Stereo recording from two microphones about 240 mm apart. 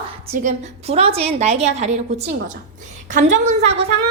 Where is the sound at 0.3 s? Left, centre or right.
Right.